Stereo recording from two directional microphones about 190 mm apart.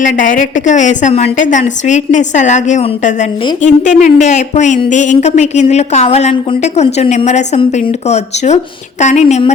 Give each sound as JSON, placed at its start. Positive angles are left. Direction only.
{"t": 0.0, "sound": "speech", "side_deg": 45}